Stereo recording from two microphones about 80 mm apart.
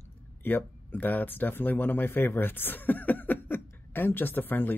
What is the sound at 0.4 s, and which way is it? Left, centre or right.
Speech, left.